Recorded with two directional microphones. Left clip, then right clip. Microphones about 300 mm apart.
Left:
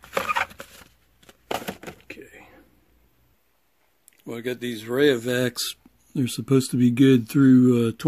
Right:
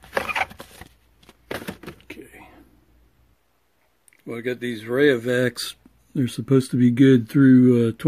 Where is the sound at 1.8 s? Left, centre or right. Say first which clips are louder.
Even; centre.